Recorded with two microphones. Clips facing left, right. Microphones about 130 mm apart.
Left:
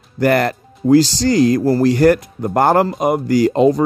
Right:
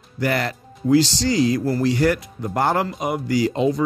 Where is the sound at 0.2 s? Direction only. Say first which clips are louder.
Left 8 dB; 55° left (ahead or behind).